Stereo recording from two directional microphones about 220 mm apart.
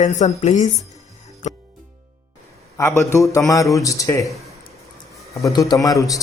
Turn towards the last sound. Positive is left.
turn(degrees=15)  # may be behind; listen again after turning